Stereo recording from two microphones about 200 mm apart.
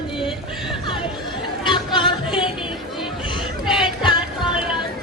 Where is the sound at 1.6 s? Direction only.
25° left (ahead or behind).